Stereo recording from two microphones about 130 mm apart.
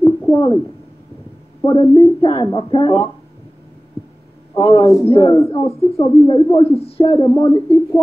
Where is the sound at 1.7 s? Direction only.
30° left (ahead or behind).